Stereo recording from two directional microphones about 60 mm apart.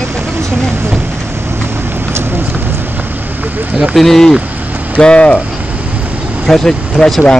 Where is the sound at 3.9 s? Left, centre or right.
Centre.